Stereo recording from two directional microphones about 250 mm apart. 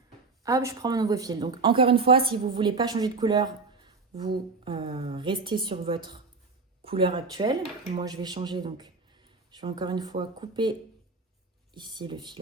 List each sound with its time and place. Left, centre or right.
0.4 s a woman's voice: centre